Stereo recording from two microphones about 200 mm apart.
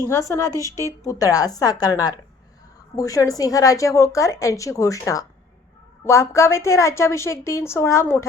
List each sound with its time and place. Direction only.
0.1 s a woman's voice: 15° left (ahead or behind)